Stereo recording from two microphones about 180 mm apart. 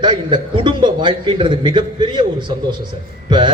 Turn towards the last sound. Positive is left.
turn(degrees=-25)  # may be behind; listen again after turning